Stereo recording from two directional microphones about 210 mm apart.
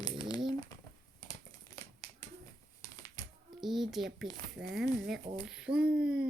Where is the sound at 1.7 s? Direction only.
15° left (ahead or behind).